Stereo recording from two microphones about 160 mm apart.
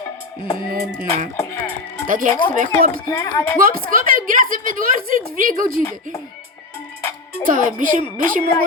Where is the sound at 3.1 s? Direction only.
15° left (ahead or behind).